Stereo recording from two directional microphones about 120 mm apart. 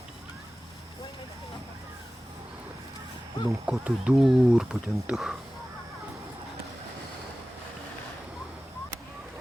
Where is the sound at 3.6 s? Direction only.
10° right (ahead or behind).